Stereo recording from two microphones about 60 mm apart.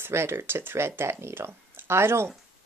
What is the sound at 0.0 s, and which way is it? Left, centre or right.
Speech, right.